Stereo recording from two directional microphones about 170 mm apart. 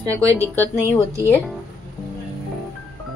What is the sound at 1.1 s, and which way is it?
Speech, 15° left (ahead or behind).